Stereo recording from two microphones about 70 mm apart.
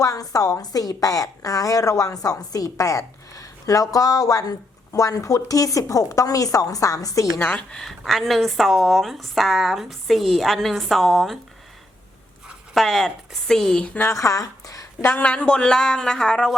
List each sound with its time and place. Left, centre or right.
0.0 s a woman's voice: left
7.3 s speech: left
7.7 s speech: centre
12.7 s speech: centre
14.0 s speech: left
15.2 s speech: centre